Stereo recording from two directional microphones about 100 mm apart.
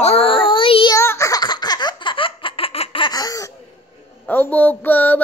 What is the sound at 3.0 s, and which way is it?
Laughter, 40° left (ahead or behind).